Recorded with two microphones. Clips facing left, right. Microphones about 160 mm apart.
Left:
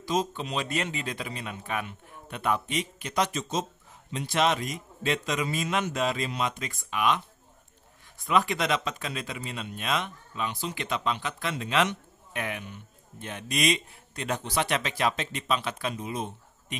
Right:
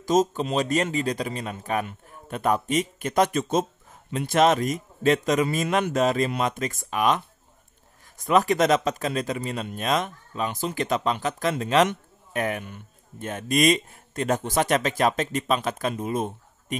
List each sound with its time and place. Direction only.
0.0 s speech: 45° right (ahead or behind)
8.2 s speech: 40° right (ahead or behind)